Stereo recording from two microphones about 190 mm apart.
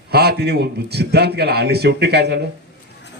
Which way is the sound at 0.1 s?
55° right (ahead or behind).